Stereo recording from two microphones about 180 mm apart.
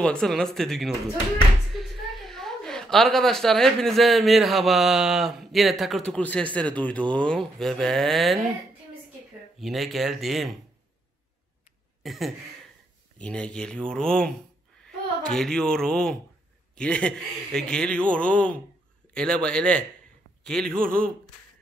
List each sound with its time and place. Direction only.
0.0 s a woman's voice: 5° left (ahead or behind)
9.6 s speech: centre (ahead or behind)
12.0 s a sound: centre (ahead or behind)
13.2 s speech: 5° left (ahead or behind)
20.8 s speech: 50° right (ahead or behind)